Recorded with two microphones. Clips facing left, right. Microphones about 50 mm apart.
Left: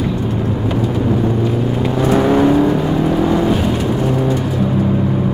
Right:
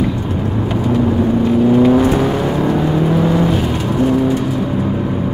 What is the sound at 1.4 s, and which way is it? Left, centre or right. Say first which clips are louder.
Vehicle: right 6 dB; centre.